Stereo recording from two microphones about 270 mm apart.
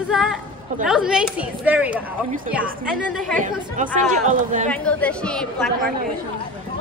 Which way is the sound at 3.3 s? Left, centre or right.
Right.